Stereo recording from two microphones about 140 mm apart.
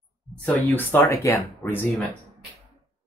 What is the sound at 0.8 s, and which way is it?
Speech, 15° left (ahead or behind).